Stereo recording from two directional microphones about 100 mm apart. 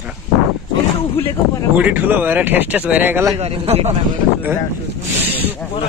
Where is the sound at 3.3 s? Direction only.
85° right.